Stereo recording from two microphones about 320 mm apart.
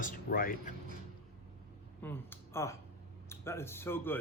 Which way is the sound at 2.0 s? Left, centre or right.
Centre.